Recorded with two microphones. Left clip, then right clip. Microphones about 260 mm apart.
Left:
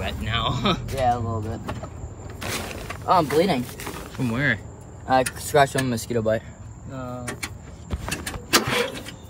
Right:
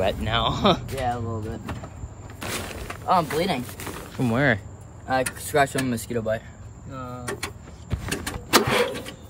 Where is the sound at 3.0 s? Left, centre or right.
Left.